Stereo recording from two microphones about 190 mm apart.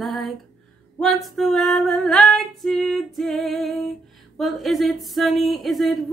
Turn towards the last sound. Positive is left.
turn(degrees=0)  # may be behind; listen again after turning